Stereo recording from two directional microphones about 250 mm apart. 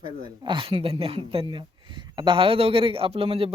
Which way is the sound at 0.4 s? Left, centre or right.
Centre.